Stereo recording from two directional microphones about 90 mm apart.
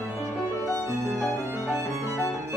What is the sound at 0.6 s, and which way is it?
Violin, 40° left (ahead or behind).